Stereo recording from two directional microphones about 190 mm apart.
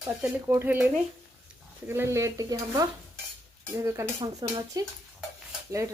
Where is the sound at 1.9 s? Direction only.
15° right (ahead or behind).